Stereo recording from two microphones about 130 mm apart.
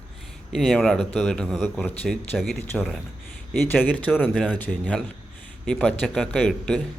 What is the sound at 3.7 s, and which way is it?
Speech, 15° left (ahead or behind).